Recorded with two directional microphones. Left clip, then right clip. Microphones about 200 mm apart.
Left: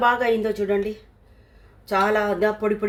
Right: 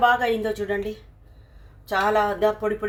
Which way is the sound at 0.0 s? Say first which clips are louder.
Even; 25° left (ahead or behind).